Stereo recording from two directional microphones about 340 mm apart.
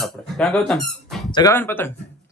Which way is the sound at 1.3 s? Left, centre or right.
Centre.